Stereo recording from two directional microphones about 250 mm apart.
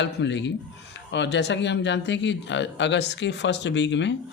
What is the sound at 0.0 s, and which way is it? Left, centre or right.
Speech, left.